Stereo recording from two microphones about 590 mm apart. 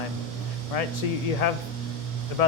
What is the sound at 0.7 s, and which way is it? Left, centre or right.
Speech, left.